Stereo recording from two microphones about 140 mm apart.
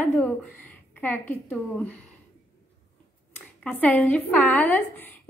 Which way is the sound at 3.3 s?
10° left (ahead or behind).